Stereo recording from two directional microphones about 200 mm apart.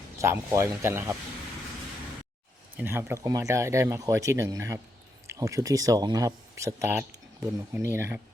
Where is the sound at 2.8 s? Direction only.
10° right (ahead or behind).